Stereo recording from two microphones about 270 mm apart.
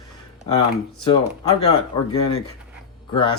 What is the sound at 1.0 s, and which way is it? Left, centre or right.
Speech, centre.